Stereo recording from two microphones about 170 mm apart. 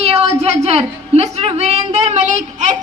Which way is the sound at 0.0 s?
35° right (ahead or behind).